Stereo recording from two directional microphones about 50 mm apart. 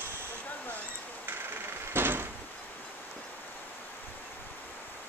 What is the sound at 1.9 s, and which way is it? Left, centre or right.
Door, right.